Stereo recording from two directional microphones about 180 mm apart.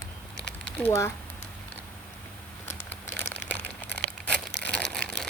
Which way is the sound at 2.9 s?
10° left (ahead or behind).